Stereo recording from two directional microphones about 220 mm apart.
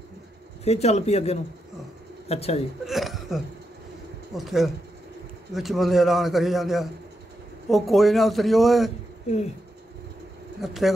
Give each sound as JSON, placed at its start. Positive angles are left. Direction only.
{"t": 0.7, "sound": "speech", "side_deg": 30}
{"t": 2.9, "sound": "hiccup", "side_deg": 0}
{"t": 4.4, "sound": "a man's voice", "side_deg": 0}
{"t": 10.6, "sound": "a man's voice", "side_deg": 0}